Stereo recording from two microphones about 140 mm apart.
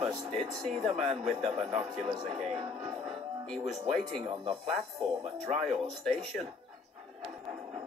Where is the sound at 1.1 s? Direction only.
50° right (ahead or behind).